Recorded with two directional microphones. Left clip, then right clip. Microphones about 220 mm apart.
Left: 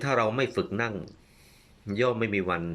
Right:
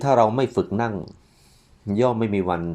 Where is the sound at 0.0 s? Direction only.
20° right (ahead or behind).